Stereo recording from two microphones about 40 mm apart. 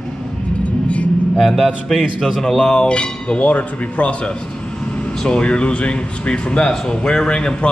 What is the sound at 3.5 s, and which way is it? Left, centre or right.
Speech, left.